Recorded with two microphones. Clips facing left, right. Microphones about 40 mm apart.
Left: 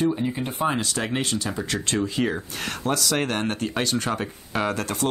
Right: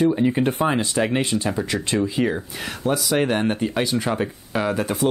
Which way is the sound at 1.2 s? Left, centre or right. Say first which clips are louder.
Right 4 dB; right.